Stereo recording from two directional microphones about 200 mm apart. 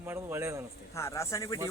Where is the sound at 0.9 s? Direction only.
15° left (ahead or behind).